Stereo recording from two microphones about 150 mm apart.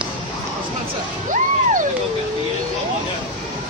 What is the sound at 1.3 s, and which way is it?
Music, 60° right (ahead or behind).